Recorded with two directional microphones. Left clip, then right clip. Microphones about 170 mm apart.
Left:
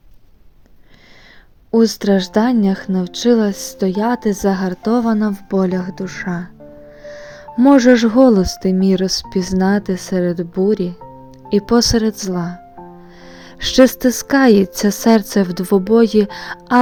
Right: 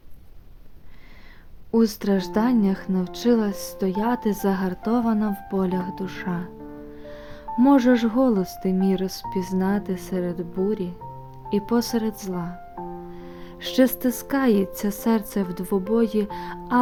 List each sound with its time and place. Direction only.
1.7 s speech: 35° left (ahead or behind)